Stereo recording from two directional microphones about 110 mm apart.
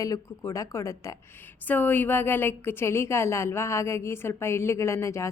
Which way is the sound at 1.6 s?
15° left (ahead or behind).